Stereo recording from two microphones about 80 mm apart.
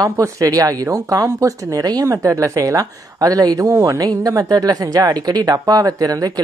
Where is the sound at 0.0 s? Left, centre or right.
Right.